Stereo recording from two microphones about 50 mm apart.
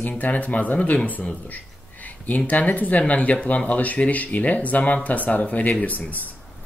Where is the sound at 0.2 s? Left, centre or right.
Left.